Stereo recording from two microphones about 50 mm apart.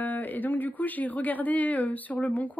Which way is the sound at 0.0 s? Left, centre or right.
Left.